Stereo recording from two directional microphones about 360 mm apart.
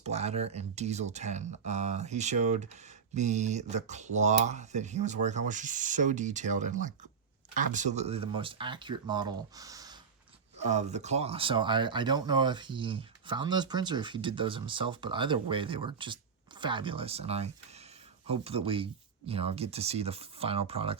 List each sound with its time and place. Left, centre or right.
0.0 s speech: centre